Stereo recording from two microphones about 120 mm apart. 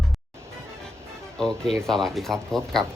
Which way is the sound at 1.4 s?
5° left (ahead or behind).